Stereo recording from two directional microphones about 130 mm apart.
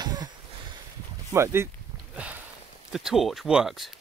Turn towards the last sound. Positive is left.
turn(degrees=-5)  # may be behind; listen again after turning